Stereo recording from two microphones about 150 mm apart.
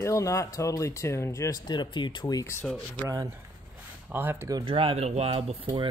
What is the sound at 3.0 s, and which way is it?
Speech, 25° right (ahead or behind).